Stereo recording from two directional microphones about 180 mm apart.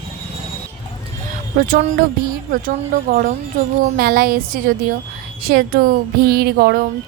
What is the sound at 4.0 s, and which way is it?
A woman's voice, 55° right (ahead or behind).